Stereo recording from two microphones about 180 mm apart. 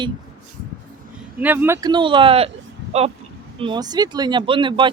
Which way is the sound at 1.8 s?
25° right (ahead or behind).